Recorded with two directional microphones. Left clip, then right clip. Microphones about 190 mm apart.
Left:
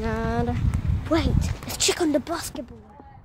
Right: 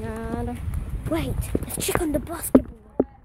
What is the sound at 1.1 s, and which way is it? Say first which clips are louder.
Speech: left 2 dB; 10° left (ahead or behind).